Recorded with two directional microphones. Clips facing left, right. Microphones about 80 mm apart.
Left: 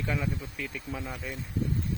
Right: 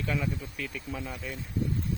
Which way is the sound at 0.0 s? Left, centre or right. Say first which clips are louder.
Even; centre.